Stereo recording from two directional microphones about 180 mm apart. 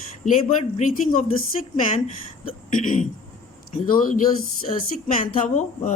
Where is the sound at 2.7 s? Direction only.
40° left (ahead or behind).